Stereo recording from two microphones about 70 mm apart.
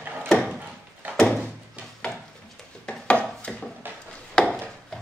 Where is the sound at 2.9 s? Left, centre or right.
Centre.